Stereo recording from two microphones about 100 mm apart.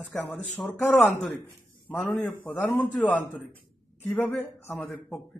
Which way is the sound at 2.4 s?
15° left (ahead or behind).